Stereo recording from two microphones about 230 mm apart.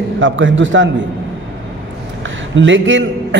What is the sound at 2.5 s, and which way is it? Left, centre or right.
Speech, right.